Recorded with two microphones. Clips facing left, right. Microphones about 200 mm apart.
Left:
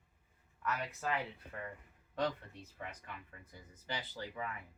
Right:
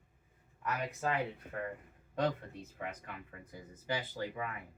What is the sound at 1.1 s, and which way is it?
Speech, 45° right (ahead or behind).